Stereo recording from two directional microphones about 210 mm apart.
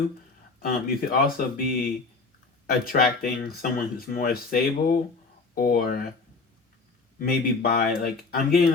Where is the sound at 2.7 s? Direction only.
45° left (ahead or behind).